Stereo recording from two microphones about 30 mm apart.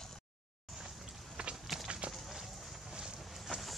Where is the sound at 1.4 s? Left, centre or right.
Right.